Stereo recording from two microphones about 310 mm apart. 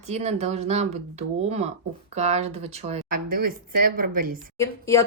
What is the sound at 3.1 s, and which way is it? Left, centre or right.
Speech, right.